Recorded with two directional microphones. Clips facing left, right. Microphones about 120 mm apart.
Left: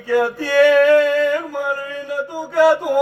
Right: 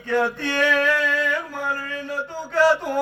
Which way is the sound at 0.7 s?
50° left (ahead or behind).